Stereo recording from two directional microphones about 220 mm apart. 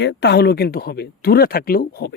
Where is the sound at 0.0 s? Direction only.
50° left (ahead or behind).